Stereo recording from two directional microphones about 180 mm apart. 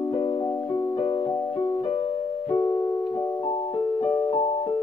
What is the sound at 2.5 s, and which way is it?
Piano, 20° left (ahead or behind).